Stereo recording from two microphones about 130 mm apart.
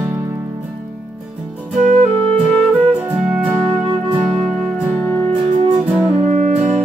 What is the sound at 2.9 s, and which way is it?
Music, 10° right (ahead or behind).